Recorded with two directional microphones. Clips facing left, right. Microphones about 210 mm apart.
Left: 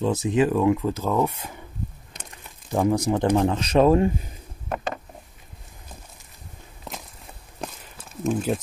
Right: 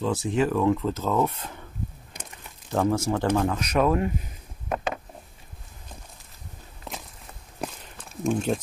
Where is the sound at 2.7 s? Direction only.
15° left (ahead or behind).